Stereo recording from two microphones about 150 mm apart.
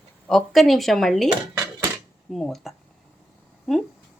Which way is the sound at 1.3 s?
30° right (ahead or behind).